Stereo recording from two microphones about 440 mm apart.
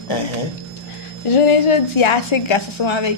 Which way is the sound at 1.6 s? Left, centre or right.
Left.